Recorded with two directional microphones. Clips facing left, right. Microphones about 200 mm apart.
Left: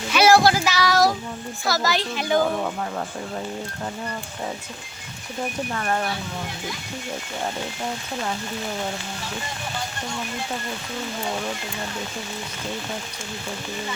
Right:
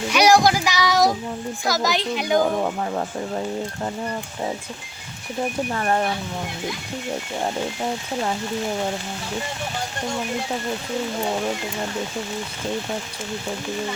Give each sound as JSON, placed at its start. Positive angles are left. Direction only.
{"t": 0.1, "sound": "child singing", "side_deg": -15}
{"t": 1.6, "sound": "speech", "side_deg": -15}
{"t": 5.7, "sound": "child singing", "side_deg": -30}